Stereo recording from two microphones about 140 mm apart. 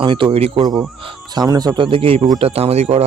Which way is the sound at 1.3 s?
30° right (ahead or behind).